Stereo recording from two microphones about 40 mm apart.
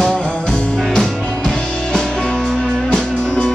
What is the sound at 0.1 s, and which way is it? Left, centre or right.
Music, centre.